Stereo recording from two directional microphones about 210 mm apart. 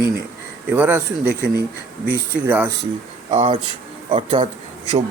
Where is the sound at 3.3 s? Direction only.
25° right (ahead or behind).